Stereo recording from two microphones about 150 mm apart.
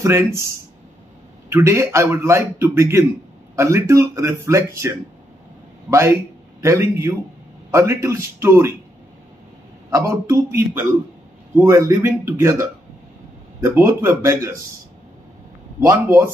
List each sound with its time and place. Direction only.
0.0 s a man's voice: 20° right (ahead or behind)
1.5 s a man's voice: 20° right (ahead or behind)
9.8 s a man's voice: 20° right (ahead or behind)
13.7 s a man's voice: 20° right (ahead or behind)
15.8 s a man's voice: 20° right (ahead or behind)